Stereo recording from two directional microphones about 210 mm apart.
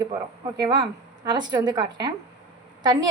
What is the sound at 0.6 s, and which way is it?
A woman's voice, 20° right (ahead or behind).